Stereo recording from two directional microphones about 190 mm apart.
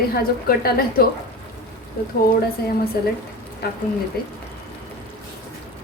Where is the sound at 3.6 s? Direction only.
55° left (ahead or behind).